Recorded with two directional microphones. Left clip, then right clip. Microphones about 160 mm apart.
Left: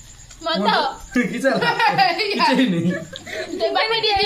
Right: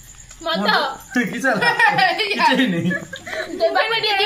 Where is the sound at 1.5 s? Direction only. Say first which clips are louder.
Right 2 dB; 25° right (ahead or behind).